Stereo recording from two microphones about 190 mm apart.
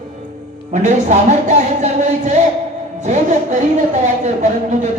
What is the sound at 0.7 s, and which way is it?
A man's voice, 40° right (ahead or behind).